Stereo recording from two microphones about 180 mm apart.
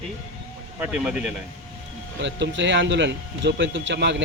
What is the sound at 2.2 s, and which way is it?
Speech, 90° right.